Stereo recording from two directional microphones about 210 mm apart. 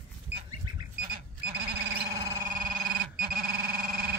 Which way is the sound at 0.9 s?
45° right (ahead or behind).